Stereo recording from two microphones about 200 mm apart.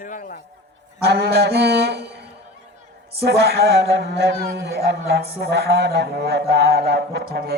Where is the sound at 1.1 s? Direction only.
55° right (ahead or behind).